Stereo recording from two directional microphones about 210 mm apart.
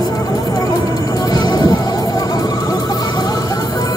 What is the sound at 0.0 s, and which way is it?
Music, 15° left (ahead or behind).